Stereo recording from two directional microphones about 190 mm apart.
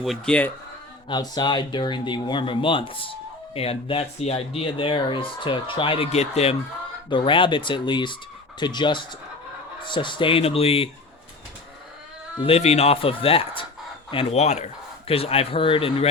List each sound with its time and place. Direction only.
0.0 s speech: 5° left (ahead or behind)
1.0 s speech: 25° left (ahead or behind)
12.4 s speech: 30° left (ahead or behind)